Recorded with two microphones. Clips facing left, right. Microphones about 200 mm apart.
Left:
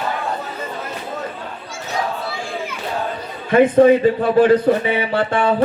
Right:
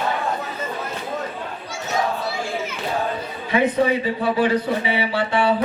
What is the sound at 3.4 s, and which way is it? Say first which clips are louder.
A man's voice: left 8 dB; 50° left (ahead or behind).